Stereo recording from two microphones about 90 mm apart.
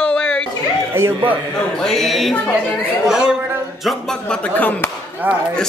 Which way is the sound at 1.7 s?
5° left (ahead or behind).